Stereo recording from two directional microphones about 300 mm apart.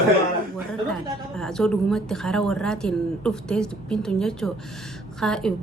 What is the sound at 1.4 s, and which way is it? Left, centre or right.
Speech, centre.